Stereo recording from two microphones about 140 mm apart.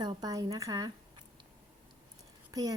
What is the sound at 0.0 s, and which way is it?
Speech, 30° right (ahead or behind).